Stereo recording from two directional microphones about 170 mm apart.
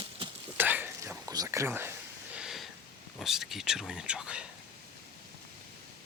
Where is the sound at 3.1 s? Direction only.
Centre (ahead or behind).